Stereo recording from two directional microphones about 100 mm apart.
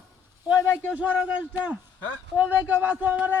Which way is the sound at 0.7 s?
20° left (ahead or behind).